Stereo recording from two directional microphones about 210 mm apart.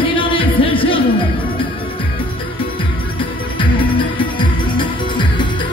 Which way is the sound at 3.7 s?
25° left (ahead or behind).